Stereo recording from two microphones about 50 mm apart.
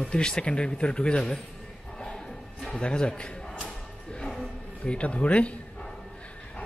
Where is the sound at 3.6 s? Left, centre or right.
Centre.